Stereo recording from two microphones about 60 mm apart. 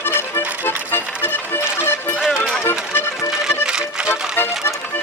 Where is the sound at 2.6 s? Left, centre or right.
Left.